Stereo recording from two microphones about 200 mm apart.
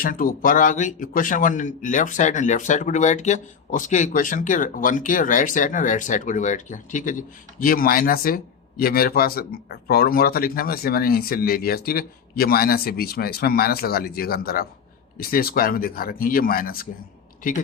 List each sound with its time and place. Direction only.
0.0 s a man's voice: 45° left (ahead or behind)